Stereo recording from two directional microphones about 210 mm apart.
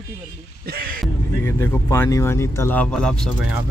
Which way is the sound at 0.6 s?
45° right (ahead or behind).